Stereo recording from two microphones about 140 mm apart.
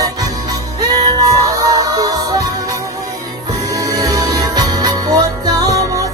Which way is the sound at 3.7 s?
25° right (ahead or behind).